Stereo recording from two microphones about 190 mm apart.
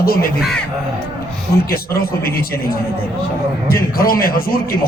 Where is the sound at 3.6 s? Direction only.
50° left (ahead or behind).